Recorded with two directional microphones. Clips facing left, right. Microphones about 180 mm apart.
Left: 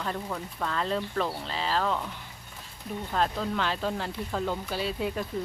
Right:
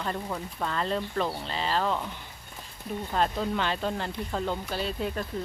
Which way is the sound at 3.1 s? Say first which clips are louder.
Right 1 dB; centre (ahead or behind).